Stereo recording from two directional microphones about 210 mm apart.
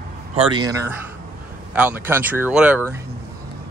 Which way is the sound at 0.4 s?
20° right (ahead or behind).